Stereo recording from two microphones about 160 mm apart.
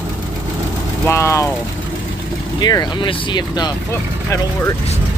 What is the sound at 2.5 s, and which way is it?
Speech, 25° left (ahead or behind).